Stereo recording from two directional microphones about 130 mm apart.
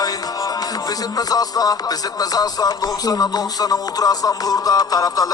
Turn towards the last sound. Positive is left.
turn(degrees=30)  # may be behind; listen again after turning